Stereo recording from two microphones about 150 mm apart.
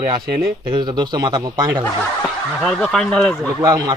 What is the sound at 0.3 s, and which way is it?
Speech, 90° right.